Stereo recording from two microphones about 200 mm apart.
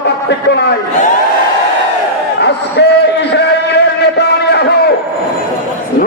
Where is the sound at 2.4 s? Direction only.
55° left (ahead or behind).